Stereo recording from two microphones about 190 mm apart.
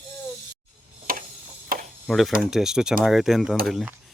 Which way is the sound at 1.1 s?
50° right (ahead or behind).